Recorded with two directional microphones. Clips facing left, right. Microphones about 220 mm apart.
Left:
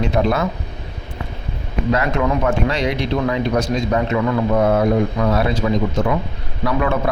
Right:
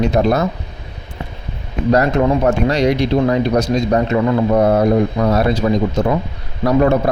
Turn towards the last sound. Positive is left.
turn(degrees=-40)  # may be behind; listen again after turning